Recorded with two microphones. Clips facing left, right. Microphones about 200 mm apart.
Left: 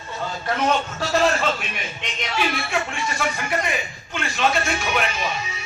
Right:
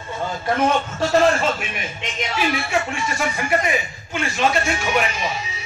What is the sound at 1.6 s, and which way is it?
Speech, 5° right (ahead or behind).